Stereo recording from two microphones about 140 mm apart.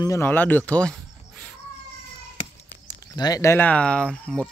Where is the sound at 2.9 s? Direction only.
25° left (ahead or behind); by 4.5 s 5° left (ahead or behind).